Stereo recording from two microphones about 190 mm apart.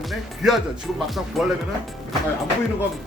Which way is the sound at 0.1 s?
Centre (ahead or behind).